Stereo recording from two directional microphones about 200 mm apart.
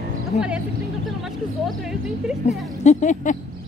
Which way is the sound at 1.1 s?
Centre (ahead or behind).